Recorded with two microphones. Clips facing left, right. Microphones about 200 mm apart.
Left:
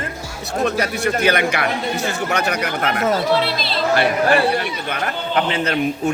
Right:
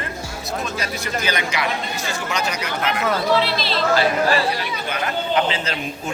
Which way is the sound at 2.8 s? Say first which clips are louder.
Left 2 dB; 45° left (ahead or behind).